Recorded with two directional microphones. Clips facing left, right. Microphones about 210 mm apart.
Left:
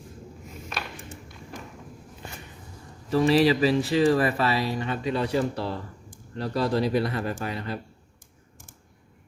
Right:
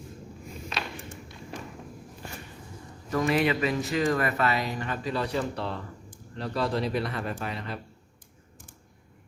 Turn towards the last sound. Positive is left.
turn(degrees=35)  # may be behind; listen again after turning